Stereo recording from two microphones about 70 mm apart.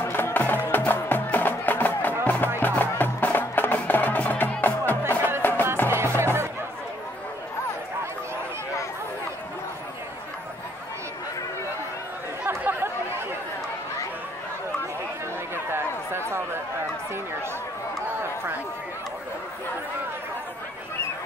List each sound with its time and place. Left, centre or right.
0.0 s music: left
5.9 s music: right
12.4 s chatter: right
15.5 s a sound: right